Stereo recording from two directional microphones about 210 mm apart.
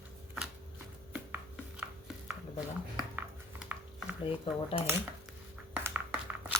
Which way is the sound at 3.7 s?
10° right (ahead or behind).